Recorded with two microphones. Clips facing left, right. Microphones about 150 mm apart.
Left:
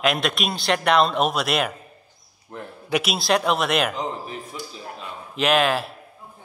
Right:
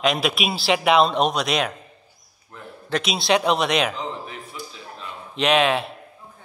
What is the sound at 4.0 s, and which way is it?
Speech, 40° left (ahead or behind).